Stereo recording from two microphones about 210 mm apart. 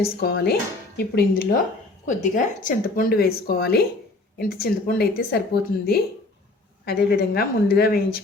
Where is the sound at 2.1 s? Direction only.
40° left (ahead or behind).